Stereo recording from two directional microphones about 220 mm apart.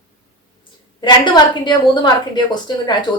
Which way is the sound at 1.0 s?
20° left (ahead or behind).